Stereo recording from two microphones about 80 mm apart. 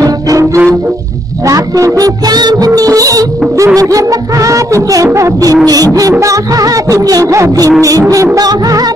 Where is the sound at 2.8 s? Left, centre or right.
Right.